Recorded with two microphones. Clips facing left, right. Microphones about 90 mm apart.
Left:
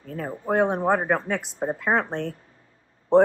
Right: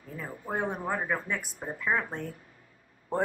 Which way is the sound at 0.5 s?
75° left (ahead or behind).